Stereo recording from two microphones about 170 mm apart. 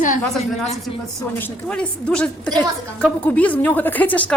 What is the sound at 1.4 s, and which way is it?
A woman's voice, 10° left (ahead or behind).